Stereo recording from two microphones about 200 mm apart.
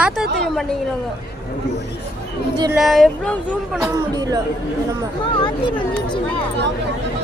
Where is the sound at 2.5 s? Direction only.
20° right (ahead or behind).